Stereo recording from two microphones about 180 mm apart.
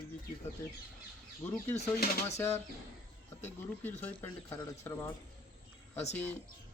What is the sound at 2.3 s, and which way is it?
Speech, 15° left (ahead or behind).